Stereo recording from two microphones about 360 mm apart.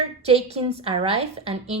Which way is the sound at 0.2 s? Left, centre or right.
Centre.